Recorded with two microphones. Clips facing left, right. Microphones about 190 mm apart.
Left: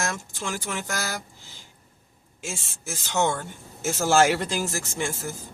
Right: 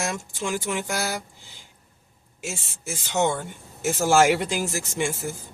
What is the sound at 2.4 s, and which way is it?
Speech, 5° right (ahead or behind).